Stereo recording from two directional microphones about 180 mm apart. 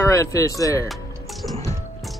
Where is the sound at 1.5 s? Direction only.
20° left (ahead or behind).